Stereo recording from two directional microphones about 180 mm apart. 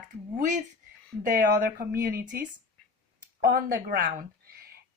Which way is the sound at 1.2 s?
50° right (ahead or behind).